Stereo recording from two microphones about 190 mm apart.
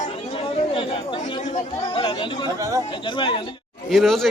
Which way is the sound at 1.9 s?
25° left (ahead or behind).